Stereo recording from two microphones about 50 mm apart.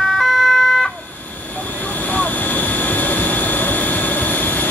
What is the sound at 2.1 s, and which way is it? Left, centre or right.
Vehicle, left.